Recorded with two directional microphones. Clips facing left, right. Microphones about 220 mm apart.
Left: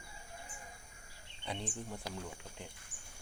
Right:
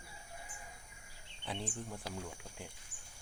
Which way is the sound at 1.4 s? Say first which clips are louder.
Even; centre (ahead or behind).